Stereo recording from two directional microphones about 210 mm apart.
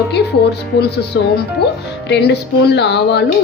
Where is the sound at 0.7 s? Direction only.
50° left (ahead or behind).